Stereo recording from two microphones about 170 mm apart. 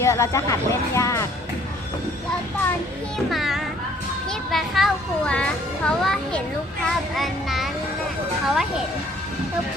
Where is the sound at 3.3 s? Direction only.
Centre (ahead or behind).